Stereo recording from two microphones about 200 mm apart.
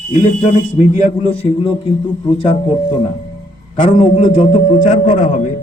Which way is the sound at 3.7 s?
35° left (ahead or behind).